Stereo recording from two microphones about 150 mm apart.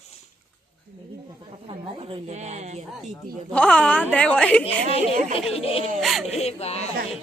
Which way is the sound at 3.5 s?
5° left (ahead or behind).